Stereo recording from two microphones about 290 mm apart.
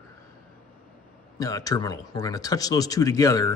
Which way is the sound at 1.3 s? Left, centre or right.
Centre.